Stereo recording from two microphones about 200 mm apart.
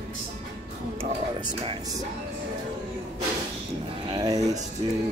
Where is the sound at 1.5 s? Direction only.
20° right (ahead or behind).